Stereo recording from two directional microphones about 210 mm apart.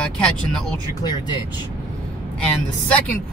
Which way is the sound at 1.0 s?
20° left (ahead or behind).